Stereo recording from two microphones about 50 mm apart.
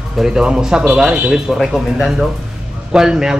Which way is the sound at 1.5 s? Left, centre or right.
Centre.